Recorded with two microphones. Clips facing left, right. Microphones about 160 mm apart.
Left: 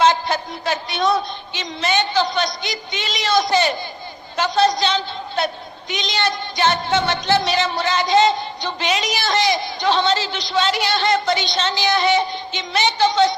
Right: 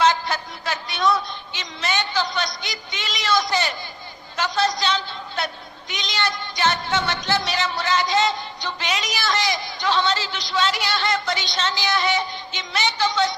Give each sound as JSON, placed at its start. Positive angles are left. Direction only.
{"t": 0.0, "sound": "speech", "side_deg": 25}